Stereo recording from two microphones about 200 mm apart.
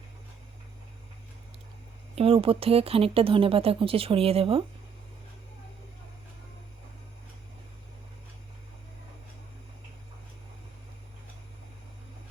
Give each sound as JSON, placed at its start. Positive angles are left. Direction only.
{"t": 2.1, "sound": "speech", "side_deg": -30}